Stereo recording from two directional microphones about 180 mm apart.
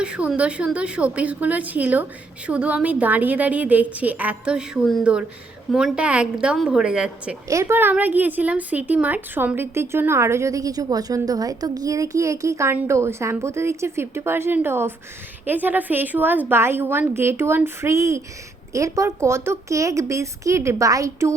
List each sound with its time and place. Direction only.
0.0 s a woman's voice: 5° right (ahead or behind)
7.4 s a woman's voice: 15° right (ahead or behind)